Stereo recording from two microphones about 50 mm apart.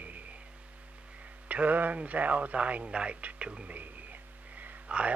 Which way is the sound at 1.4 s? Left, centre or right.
Right.